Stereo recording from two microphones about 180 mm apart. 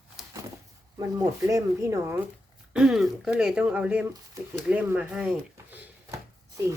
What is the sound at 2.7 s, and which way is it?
Speech, centre (ahead or behind).